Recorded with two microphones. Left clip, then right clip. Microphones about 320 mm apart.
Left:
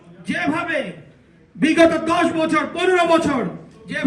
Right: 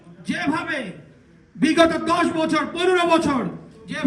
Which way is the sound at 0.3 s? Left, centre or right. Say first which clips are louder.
Left 2 dB; right.